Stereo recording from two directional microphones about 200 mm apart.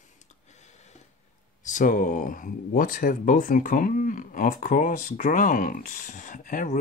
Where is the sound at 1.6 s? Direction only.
40° left (ahead or behind).